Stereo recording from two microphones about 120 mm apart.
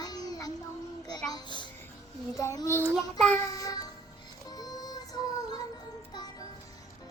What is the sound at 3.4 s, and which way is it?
Music, 30° left (ahead or behind).